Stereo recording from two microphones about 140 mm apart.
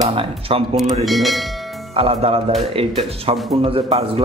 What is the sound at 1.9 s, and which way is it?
A man's voice, 45° right (ahead or behind).